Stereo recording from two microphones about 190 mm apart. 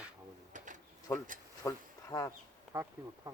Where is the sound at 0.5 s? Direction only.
40° right (ahead or behind).